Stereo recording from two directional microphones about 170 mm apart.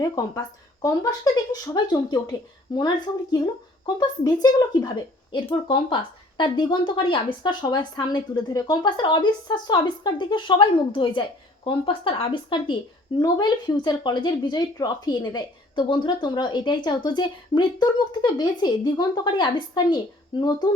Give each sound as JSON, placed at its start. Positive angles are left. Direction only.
{"t": 0.0, "sound": "a woman's voice", "side_deg": 20}
{"t": 4.8, "sound": "a woman's voice", "side_deg": 25}